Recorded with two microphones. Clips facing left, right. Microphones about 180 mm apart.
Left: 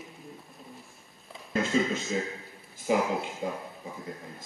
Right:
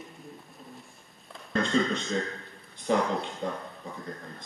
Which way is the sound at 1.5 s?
5° left (ahead or behind).